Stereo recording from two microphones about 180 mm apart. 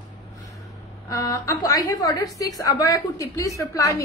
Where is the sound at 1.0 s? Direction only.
20° left (ahead or behind).